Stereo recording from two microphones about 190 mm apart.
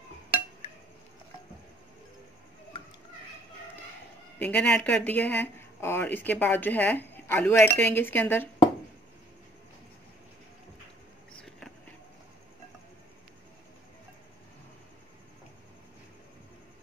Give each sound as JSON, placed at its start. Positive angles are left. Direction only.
{"t": 4.4, "sound": "speech", "side_deg": 5}